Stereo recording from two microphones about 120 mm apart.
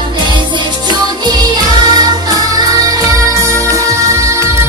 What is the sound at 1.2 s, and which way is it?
Music, 35° right (ahead or behind).